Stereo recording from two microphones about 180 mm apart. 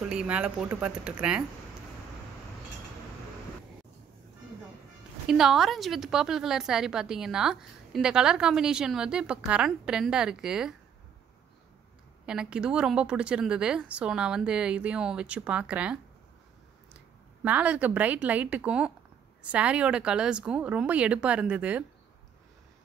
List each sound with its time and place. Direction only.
0.0 s a woman's voice: 5° right (ahead or behind)
5.2 s a woman's voice: centre (ahead or behind)
12.3 s a woman's voice: 5° right (ahead or behind)